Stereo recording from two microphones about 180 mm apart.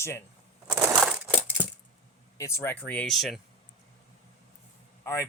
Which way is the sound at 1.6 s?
10° right (ahead or behind).